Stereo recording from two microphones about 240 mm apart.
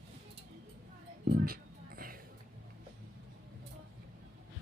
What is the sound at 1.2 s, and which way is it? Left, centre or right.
Music, right.